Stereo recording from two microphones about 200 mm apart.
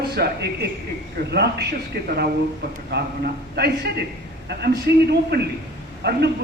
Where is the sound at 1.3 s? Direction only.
55° right (ahead or behind).